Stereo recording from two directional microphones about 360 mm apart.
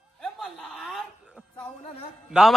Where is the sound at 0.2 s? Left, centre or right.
Centre.